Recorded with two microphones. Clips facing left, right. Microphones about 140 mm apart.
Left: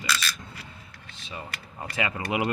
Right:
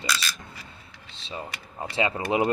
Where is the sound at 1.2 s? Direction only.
25° right (ahead or behind).